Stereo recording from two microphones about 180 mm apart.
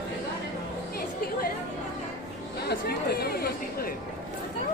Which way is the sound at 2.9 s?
60° left (ahead or behind).